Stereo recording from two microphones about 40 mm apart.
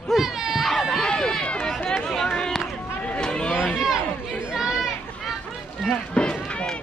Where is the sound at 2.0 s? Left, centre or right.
Centre.